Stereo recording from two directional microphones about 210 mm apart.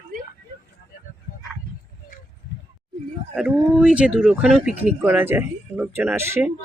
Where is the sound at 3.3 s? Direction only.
5° right (ahead or behind).